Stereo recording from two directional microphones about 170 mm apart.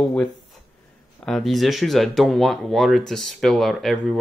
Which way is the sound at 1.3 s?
Centre (ahead or behind).